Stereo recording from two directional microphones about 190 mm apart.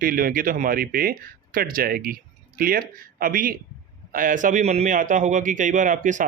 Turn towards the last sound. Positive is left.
turn(degrees=-40)  # may be behind; listen again after turning